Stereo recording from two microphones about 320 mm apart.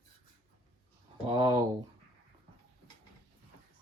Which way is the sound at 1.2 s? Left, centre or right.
Centre.